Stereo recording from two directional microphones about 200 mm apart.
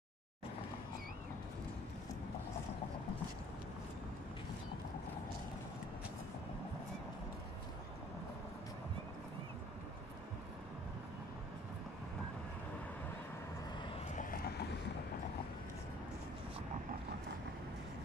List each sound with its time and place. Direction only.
13.8 s vehicle: 30° left (ahead or behind)
14.3 s boat: 50° left (ahead or behind)